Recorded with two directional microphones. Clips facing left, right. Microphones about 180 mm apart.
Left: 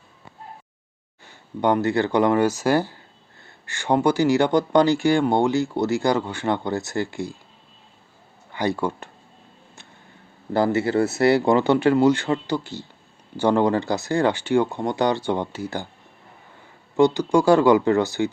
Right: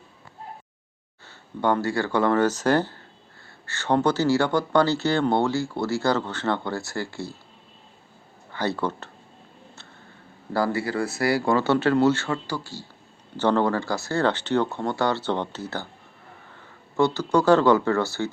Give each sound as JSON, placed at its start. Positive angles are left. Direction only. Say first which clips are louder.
{"t": 1.2, "sound": "speech", "louder": "left 3 dB", "side_deg": 15}
{"t": 8.5, "sound": "speech", "louder": "left 3 dB", "side_deg": 15}
{"t": 10.5, "sound": "speech", "louder": "left 5 dB", "side_deg": 20}
{"t": 17.0, "sound": "speech", "louder": "left 4 dB", "side_deg": 15}